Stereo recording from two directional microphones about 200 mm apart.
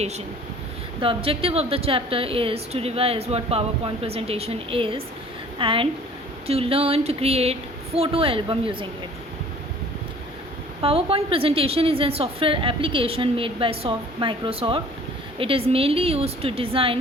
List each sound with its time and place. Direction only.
1.0 s a woman's voice: 30° right (ahead or behind)
6.5 s a sound: 30° right (ahead or behind)
7.9 s a woman's voice: 30° right (ahead or behind)
10.8 s a woman's voice: 30° right (ahead or behind)